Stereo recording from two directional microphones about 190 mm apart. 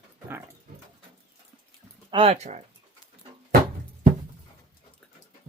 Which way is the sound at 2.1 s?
30° right (ahead or behind).